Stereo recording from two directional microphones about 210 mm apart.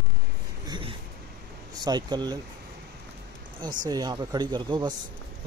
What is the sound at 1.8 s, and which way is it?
Speech, 20° right (ahead or behind).